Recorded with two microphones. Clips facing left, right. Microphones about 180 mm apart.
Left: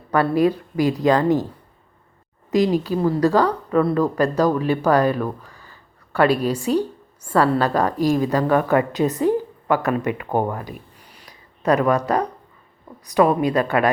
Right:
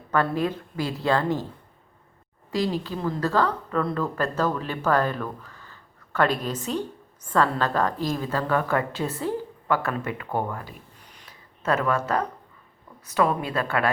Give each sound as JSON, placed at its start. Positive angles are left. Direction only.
{"t": 0.1, "sound": "a woman's voice", "side_deg": 10}
{"t": 2.5, "sound": "a woman's voice", "side_deg": 15}
{"t": 10.2, "sound": "speech", "side_deg": 40}
{"t": 10.5, "sound": "a sound", "side_deg": 15}
{"t": 13.4, "sound": "a woman's voice", "side_deg": 15}